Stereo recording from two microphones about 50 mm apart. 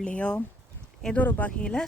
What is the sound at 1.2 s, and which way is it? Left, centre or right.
Speech, left.